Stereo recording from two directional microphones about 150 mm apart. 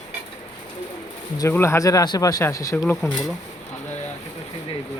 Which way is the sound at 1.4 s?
15° left (ahead or behind).